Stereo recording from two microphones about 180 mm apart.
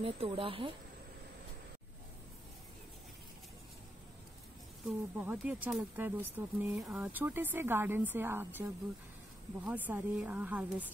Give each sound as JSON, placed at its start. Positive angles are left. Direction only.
{"t": 0.0, "sound": "speech", "side_deg": -30}
{"t": 4.8, "sound": "speech", "side_deg": -5}
{"t": 9.7, "sound": "speech", "side_deg": -10}